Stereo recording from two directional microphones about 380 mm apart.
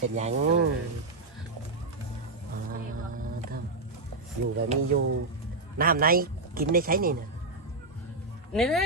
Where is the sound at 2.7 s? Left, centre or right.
Right.